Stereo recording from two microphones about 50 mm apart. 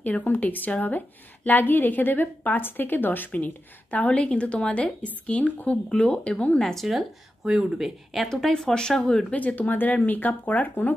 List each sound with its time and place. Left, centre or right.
0.0 s a woman's voice: left
4.1 s speech: left
6.6 s speech: centre
7.4 s speech: centre
8.3 s speech: centre
9.3 s a woman's voice: left